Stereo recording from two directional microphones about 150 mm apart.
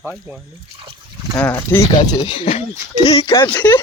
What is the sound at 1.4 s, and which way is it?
Speech, 15° left (ahead or behind).